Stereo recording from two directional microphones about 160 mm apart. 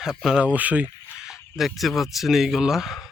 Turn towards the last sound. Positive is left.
turn(degrees=0)  # may be behind; listen again after turning